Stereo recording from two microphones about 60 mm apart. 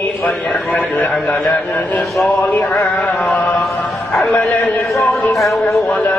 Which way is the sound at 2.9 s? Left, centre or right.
Left.